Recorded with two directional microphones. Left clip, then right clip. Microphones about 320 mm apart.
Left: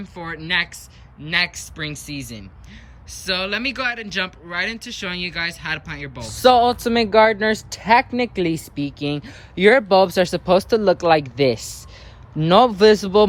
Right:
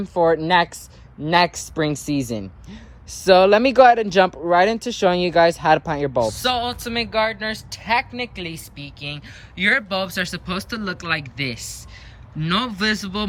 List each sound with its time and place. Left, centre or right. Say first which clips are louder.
0.0 s speech: right 14 dB; centre
6.2 s speech: left 7 dB; centre